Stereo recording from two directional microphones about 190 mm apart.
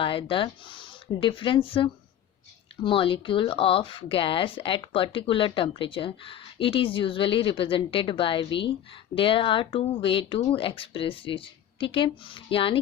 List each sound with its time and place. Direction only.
0.0 s speech: 25° left (ahead or behind)